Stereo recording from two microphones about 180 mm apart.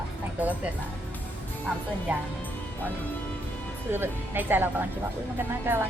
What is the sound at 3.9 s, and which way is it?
Speech, 10° right (ahead or behind).